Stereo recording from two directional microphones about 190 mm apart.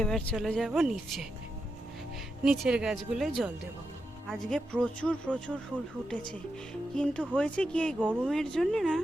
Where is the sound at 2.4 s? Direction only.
5° right (ahead or behind).